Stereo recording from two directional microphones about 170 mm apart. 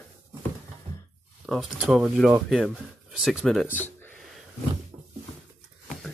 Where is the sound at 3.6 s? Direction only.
10° left (ahead or behind).